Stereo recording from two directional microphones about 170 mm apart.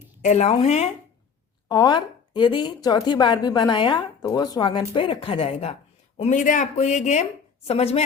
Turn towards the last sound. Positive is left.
turn(degrees=35)  # may be behind; listen again after turning